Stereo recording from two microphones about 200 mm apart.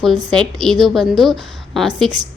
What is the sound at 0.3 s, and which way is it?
A woman's voice, centre (ahead or behind).